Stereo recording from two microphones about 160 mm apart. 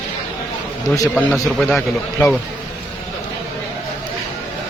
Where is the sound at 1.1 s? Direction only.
5° left (ahead or behind).